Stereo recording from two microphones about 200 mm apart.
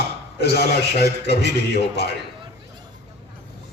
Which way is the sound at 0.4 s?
55° left (ahead or behind).